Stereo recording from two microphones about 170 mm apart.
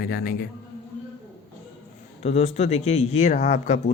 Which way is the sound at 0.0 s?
65° left (ahead or behind).